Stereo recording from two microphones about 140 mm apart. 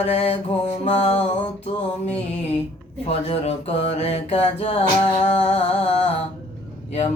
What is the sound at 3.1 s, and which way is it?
Music, 45° left (ahead or behind).